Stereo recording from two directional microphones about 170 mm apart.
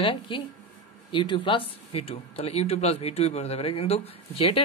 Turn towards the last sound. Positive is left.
turn(degrees=35)  # may be behind; listen again after turning